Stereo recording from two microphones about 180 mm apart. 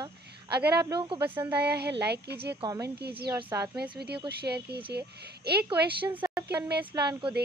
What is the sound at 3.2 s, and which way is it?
Speech, 20° right (ahead or behind).